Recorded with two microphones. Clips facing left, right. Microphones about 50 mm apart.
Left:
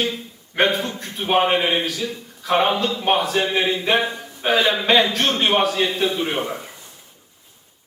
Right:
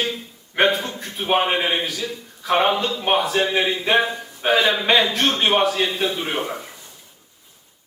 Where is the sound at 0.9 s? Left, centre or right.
Centre.